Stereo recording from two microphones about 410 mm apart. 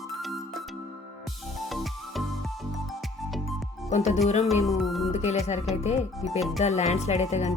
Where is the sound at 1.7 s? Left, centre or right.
Centre.